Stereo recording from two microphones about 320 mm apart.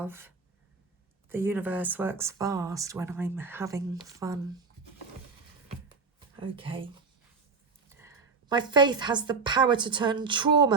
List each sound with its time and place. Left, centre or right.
0.0 s speech: centre
1.3 s speech: centre
6.1 s a woman's voice: centre